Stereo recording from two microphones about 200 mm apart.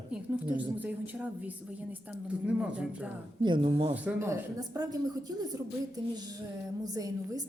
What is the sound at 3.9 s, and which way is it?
A woman's voice, 10° right (ahead or behind).